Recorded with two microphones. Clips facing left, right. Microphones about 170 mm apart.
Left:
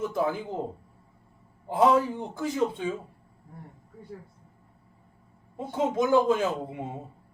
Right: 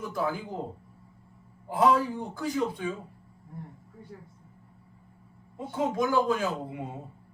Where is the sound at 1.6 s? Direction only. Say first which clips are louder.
Left 2 dB; 25° left (ahead or behind).